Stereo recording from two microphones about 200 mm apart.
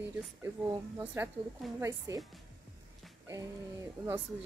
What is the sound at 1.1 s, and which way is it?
Speech, 10° right (ahead or behind).